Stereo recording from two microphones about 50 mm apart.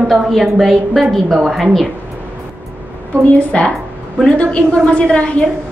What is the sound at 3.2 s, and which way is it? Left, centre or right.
A woman's voice, left.